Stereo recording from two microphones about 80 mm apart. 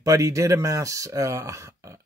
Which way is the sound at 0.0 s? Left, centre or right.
Right.